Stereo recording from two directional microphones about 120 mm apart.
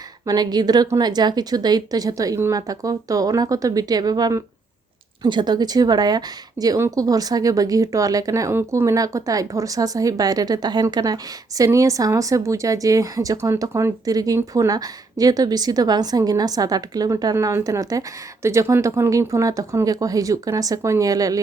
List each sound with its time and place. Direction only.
0.3 s a woman's voice: 35° right (ahead or behind)